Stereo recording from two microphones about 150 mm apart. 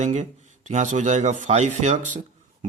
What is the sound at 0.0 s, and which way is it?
A man's voice, 50° right (ahead or behind).